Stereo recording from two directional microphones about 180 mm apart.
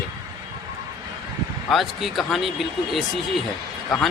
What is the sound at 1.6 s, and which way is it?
Speech, centre (ahead or behind).